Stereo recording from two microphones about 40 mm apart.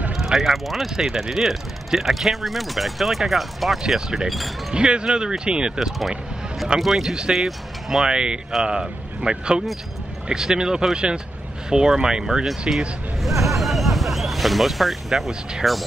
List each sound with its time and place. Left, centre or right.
0.1 s speech: centre
4.7 s speech: right
5.8 s speech: centre
8.0 s speech: right
13.2 s a sound: centre
15.6 s speech: centre